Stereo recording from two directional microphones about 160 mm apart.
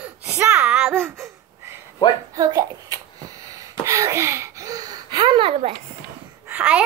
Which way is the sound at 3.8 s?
20° right (ahead or behind).